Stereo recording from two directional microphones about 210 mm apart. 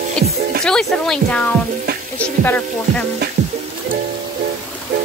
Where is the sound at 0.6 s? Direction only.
5° left (ahead or behind).